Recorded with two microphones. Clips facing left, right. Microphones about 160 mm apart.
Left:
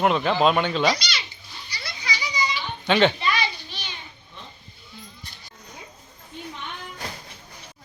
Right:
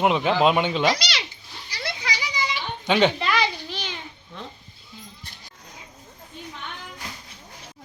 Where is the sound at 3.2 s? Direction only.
90° right.